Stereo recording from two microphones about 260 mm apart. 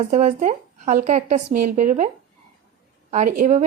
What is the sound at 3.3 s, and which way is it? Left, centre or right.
Speech, right.